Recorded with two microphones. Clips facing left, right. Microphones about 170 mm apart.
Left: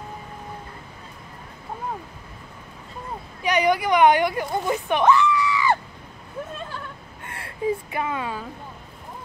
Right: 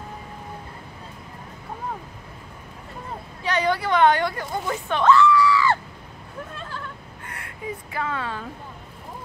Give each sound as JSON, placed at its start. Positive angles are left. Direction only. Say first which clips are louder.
{"t": 3.4, "sound": "speech", "louder": "left 3 dB", "side_deg": 15}
{"t": 7.2, "sound": "wail", "louder": "left 8 dB", "side_deg": 25}
{"t": 8.0, "sound": "a woman's voice", "louder": "left 1 dB", "side_deg": 15}